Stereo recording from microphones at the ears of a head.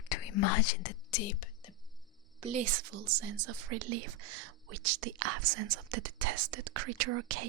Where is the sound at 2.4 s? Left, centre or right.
Right.